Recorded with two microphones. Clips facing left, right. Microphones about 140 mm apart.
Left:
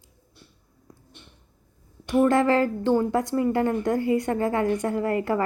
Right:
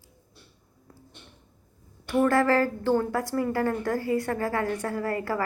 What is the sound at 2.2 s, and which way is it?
A woman's voice, 20° left (ahead or behind).